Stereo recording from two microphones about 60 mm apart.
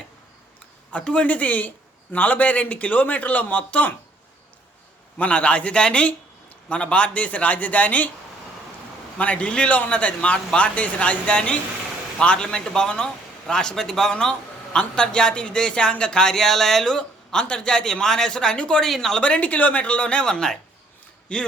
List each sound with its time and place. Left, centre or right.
0.9 s speech: left
5.1 s speech: left
9.1 s a man's voice: left
19.2 s a man's voice: left